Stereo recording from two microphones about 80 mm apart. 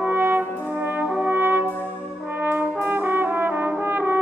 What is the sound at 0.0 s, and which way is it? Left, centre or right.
Brass instrument, right.